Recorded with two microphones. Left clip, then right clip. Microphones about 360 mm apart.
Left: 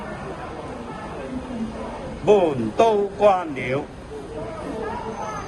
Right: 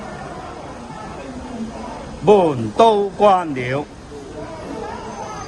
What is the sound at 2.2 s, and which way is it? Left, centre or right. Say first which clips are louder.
Speech: right 4 dB; right.